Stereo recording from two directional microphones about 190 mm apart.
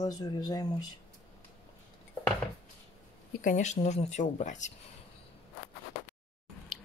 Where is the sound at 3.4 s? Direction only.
40° left (ahead or behind).